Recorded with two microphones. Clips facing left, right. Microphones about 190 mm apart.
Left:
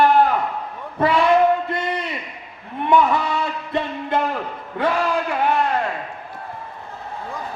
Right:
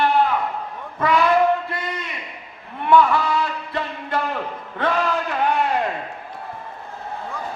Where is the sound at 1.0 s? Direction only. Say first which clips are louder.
Left 2 dB; 30° left (ahead or behind).